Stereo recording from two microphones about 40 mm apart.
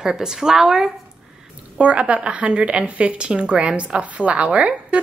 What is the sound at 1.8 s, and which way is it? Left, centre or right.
A woman's voice, right.